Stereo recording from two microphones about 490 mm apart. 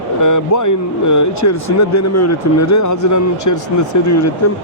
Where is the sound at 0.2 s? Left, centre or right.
Left.